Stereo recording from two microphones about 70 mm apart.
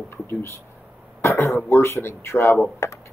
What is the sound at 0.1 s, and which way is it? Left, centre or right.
Speech, left.